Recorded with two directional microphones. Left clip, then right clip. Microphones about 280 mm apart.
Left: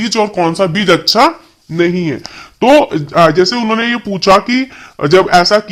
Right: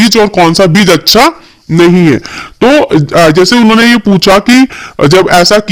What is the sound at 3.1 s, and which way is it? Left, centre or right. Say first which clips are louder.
Speech: right 3 dB; right.